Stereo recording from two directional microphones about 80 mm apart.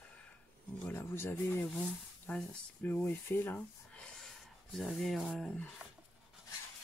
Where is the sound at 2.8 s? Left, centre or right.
Left.